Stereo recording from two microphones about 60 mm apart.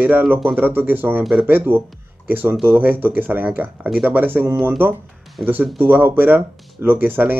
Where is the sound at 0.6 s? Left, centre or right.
Right.